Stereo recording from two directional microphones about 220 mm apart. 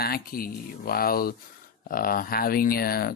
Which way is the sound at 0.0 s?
45° left (ahead or behind).